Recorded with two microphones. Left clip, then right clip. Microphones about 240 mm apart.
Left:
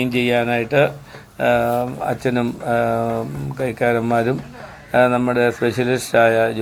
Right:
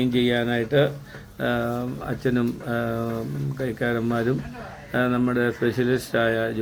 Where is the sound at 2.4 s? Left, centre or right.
Left.